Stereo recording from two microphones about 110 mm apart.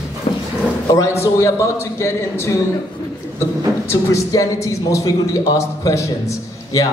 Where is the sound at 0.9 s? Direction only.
25° left (ahead or behind).